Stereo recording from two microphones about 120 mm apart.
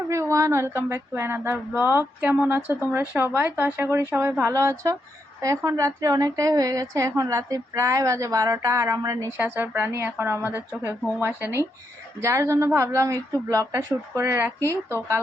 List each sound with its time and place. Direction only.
0.1 s a woman's voice: 25° right (ahead or behind)